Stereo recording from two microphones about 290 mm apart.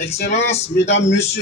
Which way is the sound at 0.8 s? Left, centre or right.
Left.